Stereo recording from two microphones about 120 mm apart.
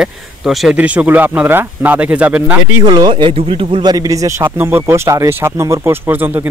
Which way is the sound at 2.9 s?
40° right (ahead or behind).